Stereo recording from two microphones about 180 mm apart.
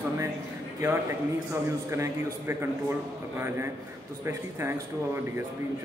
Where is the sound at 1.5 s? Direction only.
15° right (ahead or behind).